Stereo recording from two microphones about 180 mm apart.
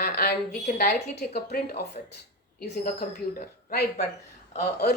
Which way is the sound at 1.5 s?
60° left (ahead or behind).